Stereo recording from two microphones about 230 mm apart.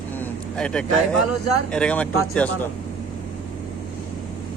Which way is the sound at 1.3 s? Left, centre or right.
Left.